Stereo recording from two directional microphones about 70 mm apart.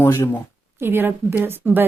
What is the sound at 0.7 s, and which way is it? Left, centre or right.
A woman's voice, right.